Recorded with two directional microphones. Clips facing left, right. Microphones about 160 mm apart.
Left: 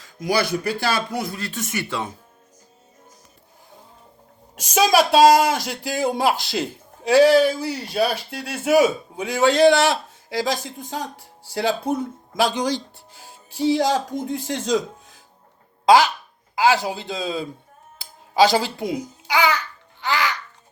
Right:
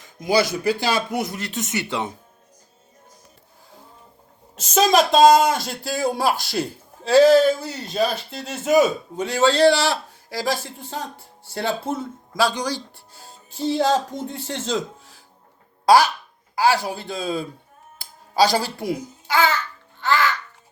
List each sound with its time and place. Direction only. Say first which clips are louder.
0.0 s a sound: right 2 dB; 20° right (ahead or behind)
0.8 s speech: right 1 dB; 20° right (ahead or behind)
4.5 s a man's voice: even; 10° left (ahead or behind)
16.6 s a man's voice: left 1 dB; 20° left (ahead or behind)
18.3 s babbling: left 2 dB; 20° left (ahead or behind)